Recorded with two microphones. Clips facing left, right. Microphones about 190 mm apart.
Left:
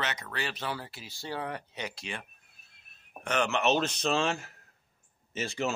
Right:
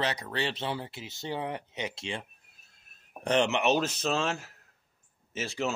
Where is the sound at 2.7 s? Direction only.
35° right (ahead or behind).